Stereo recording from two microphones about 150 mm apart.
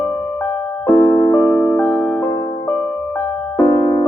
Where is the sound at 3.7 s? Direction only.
20° left (ahead or behind).